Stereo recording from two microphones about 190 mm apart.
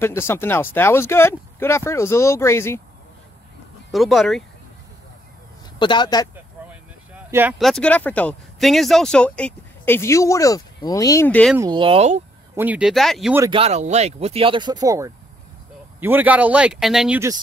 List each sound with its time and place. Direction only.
0.0 s speech: 15° left (ahead or behind)
3.9 s speech: centre (ahead or behind)
5.8 s speech: 25° left (ahead or behind)
7.2 s speech: 10° right (ahead or behind)
7.5 s speech: centre (ahead or behind)
11.5 s speech: 20° right (ahead or behind)
12.5 s speech: 10° right (ahead or behind)
13.5 s speech: 35° right (ahead or behind); by 17.2 s centre (ahead or behind)